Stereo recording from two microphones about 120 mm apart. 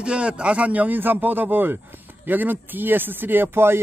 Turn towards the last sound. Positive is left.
turn(degrees=-20)  # may be behind; listen again after turning